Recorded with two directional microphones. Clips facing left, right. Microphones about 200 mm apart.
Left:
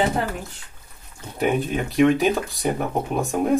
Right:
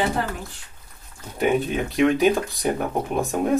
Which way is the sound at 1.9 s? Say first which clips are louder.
Left 1 dB; centre (ahead or behind).